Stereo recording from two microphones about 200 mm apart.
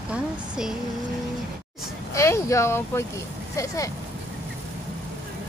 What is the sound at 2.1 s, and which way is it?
Speech, 15° left (ahead or behind).